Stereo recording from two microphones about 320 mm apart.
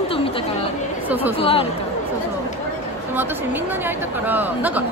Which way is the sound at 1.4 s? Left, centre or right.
Centre.